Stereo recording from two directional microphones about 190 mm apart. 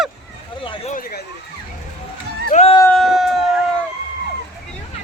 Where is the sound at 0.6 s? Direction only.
25° left (ahead or behind).